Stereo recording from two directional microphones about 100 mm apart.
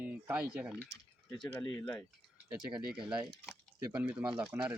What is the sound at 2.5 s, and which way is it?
Speech, 15° right (ahead or behind).